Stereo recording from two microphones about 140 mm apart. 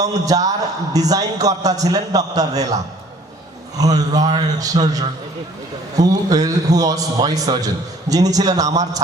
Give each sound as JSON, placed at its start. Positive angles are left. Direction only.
{"t": 0.0, "sound": "a man's voice", "side_deg": -25}
{"t": 3.8, "sound": "a man's voice", "side_deg": -25}